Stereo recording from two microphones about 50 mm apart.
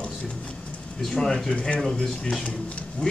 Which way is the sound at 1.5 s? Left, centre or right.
Left.